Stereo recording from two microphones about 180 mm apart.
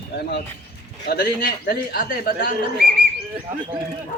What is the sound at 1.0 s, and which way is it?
A man's voice, 55° left (ahead or behind).